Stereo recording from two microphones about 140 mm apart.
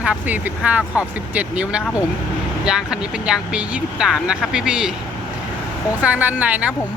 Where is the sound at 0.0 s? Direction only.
10° right (ahead or behind).